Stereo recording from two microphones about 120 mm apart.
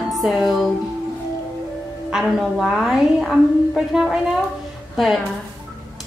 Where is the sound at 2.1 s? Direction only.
5° right (ahead or behind).